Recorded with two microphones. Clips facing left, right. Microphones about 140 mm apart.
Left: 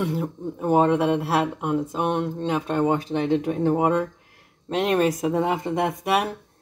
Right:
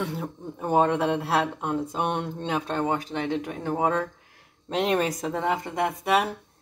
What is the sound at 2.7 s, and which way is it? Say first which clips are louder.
Speech: left 7 dB; 20° left (ahead or behind).